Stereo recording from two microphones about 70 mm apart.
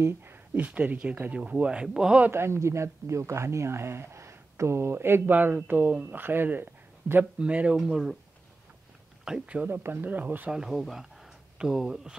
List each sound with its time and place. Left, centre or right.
0.6 s speech: right
2.3 s speech: right; by 7.7 s centre
7.7 s speech: centre
9.3 s speech: centre
9.7 s speech: right
10.5 s speech: centre